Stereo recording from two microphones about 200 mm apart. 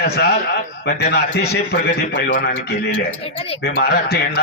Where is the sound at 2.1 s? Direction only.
65° left (ahead or behind).